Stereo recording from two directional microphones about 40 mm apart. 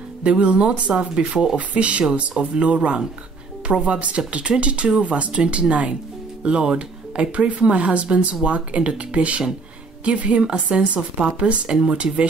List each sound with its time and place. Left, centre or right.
0.2 s speech: right
0.9 s speech: centre
1.6 s speech: right